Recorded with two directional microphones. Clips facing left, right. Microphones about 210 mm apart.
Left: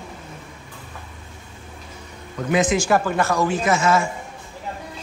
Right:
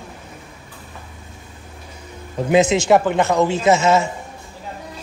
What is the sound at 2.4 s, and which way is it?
Speech, 25° right (ahead or behind).